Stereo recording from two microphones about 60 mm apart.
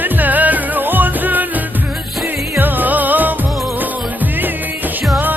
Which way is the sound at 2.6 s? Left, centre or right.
Right.